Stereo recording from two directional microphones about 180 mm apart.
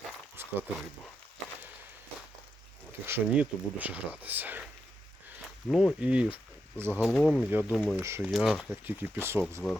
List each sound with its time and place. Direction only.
0.4 s a sound: 10° right (ahead or behind)
3.1 s speech: 10° right (ahead or behind)
7.0 s speech: 5° left (ahead or behind)
8.0 s speech: 15° right (ahead or behind)
8.3 s speech: centre (ahead or behind)
8.7 s speech: 10° right (ahead or behind)